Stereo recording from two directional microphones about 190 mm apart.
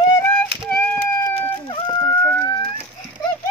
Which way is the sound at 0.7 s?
10° left (ahead or behind).